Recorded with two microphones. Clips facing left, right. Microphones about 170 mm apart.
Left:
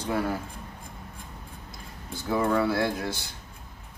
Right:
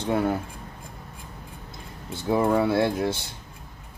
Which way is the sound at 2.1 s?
25° right (ahead or behind).